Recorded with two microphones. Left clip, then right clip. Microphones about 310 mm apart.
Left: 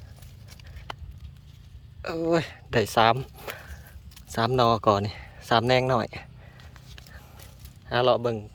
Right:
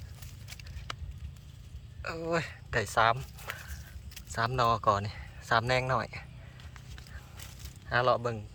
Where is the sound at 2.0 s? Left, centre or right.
Left.